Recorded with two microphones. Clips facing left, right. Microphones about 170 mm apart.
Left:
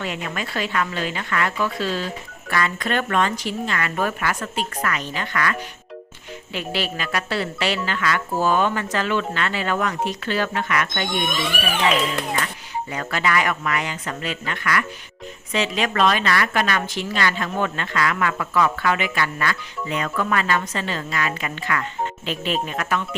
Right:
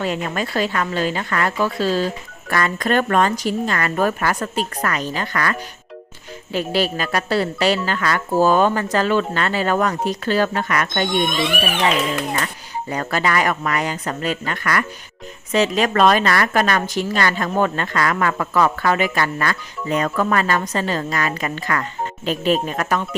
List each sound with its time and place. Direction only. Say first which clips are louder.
0.0 s a woman's voice: right 5 dB; 40° right (ahead or behind)
12.9 s a woman's voice: right 3 dB; 40° right (ahead or behind)